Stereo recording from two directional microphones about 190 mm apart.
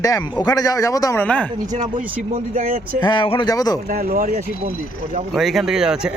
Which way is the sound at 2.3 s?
45° right (ahead or behind).